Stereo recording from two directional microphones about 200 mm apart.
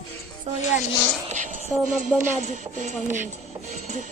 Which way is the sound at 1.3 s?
40° right (ahead or behind).